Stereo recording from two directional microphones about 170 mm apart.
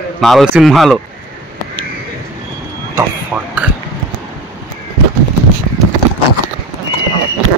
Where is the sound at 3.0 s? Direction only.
10° right (ahead or behind).